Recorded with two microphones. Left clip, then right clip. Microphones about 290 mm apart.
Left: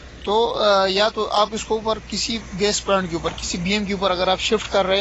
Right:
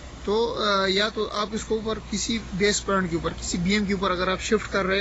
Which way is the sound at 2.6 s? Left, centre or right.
Centre.